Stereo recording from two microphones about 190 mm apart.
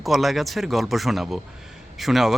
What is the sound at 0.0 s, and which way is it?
Speech, centre (ahead or behind).